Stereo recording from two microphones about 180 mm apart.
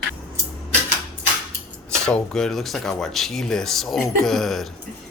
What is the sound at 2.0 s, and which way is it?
Speech, 5° left (ahead or behind).